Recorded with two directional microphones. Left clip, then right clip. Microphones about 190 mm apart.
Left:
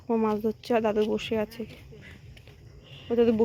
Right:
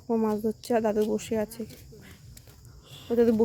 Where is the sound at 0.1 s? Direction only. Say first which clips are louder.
Left 1 dB; 5° right (ahead or behind).